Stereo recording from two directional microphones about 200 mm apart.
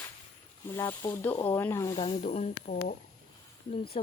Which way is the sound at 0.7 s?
15° left (ahead or behind).